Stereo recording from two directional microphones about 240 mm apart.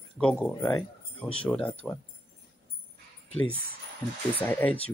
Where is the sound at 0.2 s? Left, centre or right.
Centre.